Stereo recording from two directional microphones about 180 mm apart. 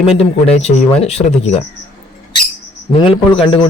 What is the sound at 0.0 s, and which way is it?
Speech, 35° left (ahead or behind).